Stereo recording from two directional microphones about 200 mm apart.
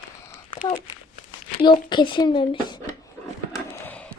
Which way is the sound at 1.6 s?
25° left (ahead or behind).